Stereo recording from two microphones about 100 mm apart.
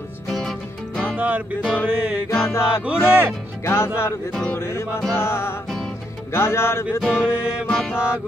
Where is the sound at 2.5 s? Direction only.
25° left (ahead or behind).